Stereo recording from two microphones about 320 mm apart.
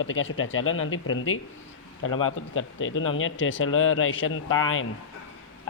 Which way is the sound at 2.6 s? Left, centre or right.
Left.